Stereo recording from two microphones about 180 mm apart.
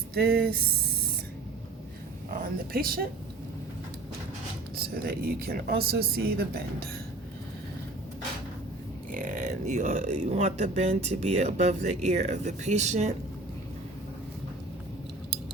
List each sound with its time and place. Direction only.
0.1 s speech: 60° right (ahead or behind)
2.4 s speech: 55° right (ahead or behind)
5.0 s speech: 55° right (ahead or behind)
9.1 s speech: 45° right (ahead or behind)